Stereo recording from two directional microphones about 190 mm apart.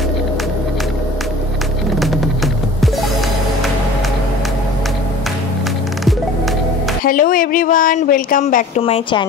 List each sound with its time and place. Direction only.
2.0 s music: centre (ahead or behind)
7.1 s speech: 50° left (ahead or behind)
8.8 s a woman's voice: 30° left (ahead or behind)